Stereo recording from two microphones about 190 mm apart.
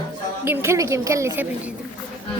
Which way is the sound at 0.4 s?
10° right (ahead or behind).